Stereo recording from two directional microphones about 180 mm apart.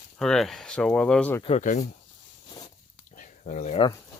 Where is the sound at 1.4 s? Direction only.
40° left (ahead or behind).